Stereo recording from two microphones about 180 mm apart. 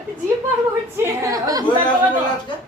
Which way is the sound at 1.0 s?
20° right (ahead or behind).